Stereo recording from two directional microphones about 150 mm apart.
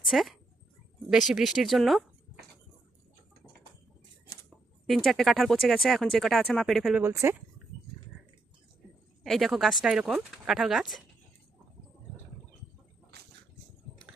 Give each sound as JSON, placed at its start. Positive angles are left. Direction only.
{"t": 0.0, "sound": "speech", "side_deg": 0}
{"t": 4.9, "sound": "speech", "side_deg": 0}
{"t": 7.0, "sound": "speech", "side_deg": -20}
{"t": 9.2, "sound": "speech", "side_deg": 0}
{"t": 13.1, "sound": "a sound", "side_deg": -90}